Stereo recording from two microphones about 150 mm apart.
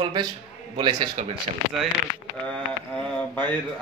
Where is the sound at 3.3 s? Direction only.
10° left (ahead or behind).